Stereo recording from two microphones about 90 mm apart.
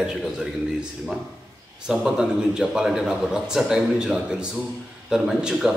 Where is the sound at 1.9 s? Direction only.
5° right (ahead or behind).